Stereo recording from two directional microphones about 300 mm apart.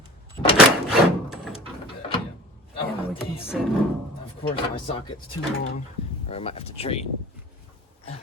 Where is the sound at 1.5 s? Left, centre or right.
Centre.